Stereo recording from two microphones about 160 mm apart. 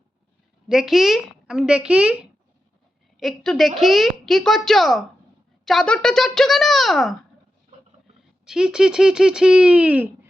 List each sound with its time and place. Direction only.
0.7 s a woman's voice: centre (ahead or behind)
3.2 s a woman's voice: centre (ahead or behind)
7.7 s a sound: 50° right (ahead or behind)
8.4 s a woman's voice: 5° right (ahead or behind)